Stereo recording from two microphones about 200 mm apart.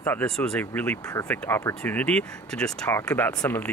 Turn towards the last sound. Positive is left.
turn(degrees=10)  # may be behind; listen again after turning